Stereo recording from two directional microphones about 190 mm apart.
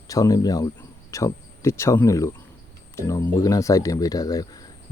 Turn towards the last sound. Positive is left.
turn(degrees=20)  # may be behind; listen again after turning